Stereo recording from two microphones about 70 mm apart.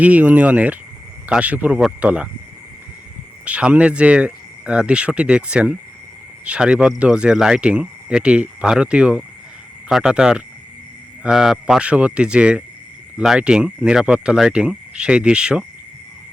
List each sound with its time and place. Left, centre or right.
0.0 s speech: right
3.4 s speech: centre